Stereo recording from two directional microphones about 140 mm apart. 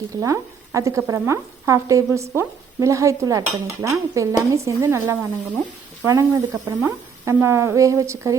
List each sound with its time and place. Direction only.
0.2 s dishes: 20° right (ahead or behind)